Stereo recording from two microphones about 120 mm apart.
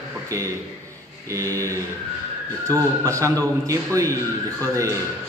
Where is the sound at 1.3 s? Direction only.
25° right (ahead or behind).